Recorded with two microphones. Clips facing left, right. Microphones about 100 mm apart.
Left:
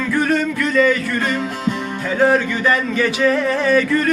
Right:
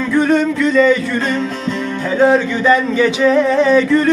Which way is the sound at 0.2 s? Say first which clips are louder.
Right 6 dB; 20° right (ahead or behind).